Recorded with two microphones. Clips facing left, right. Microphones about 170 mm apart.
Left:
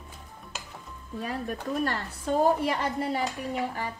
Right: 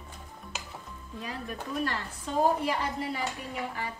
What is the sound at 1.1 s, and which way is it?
Speech, 45° left (ahead or behind).